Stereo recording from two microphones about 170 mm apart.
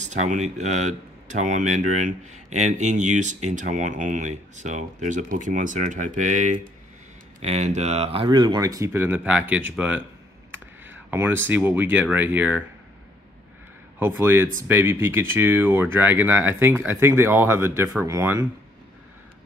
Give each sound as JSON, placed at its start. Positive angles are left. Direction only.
{"t": 0.0, "sound": "speech", "side_deg": -45}
{"t": 13.9, "sound": "speech", "side_deg": -15}